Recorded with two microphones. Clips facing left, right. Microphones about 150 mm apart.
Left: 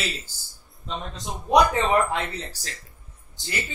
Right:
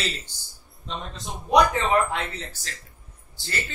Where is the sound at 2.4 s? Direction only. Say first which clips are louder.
Left 2 dB; 35° left (ahead or behind).